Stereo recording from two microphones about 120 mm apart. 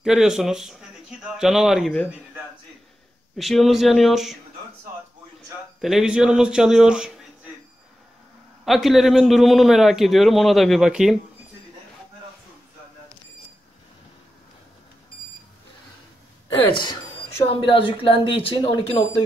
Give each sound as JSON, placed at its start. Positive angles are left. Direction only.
{"t": 0.0, "sound": "a man's voice", "side_deg": -5}
{"t": 3.3, "sound": "a man's voice", "side_deg": 0}
{"t": 5.8, "sound": "a man's voice", "side_deg": -5}
{"t": 8.6, "sound": "a man's voice", "side_deg": 0}
{"t": 17.5, "sound": "speech", "side_deg": 45}